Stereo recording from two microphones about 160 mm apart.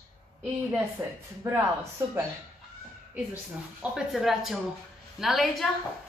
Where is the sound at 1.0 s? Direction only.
15° right (ahead or behind).